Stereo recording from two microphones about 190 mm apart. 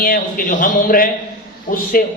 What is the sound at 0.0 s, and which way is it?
A man's voice, 50° left (ahead or behind).